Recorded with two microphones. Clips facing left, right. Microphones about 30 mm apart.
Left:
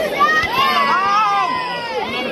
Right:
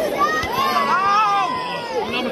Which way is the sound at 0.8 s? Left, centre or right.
Left.